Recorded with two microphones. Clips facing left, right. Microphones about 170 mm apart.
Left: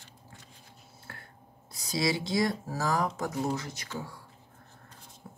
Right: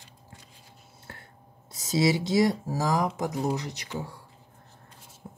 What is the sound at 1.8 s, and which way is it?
Speech, 25° right (ahead or behind).